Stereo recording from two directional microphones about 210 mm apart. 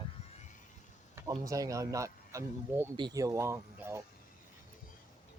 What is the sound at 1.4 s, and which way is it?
Speech, 15° right (ahead or behind).